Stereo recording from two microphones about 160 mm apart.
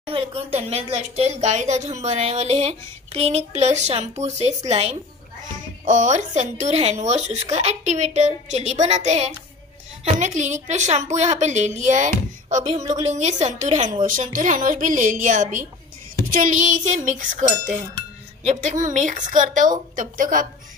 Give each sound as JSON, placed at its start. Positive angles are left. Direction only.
{"t": 0.0, "sound": "speech", "side_deg": -35}
{"t": 5.4, "sound": "a woman's voice", "side_deg": -55}
{"t": 12.4, "sound": "music", "side_deg": -45}
{"t": 12.9, "sound": "a woman's voice", "side_deg": -45}